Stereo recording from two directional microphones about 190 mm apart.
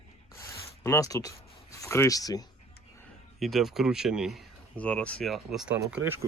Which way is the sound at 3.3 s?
Centre (ahead or behind).